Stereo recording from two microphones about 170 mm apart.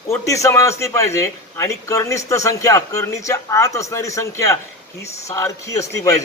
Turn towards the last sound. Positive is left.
turn(degrees=20)  # may be behind; listen again after turning